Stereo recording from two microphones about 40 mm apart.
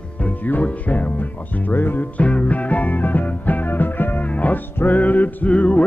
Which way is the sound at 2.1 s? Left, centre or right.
Left.